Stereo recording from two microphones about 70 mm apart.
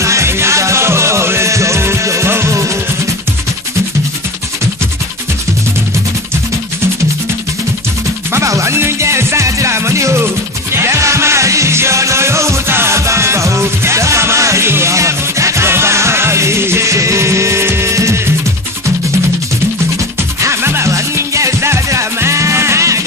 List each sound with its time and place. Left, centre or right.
0.0 s music: right
8.3 s music: right
20.4 s music: right